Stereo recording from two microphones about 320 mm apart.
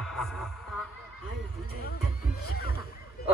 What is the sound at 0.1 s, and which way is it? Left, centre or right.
Music, centre.